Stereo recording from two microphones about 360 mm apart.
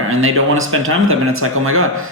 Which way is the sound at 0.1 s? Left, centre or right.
Right.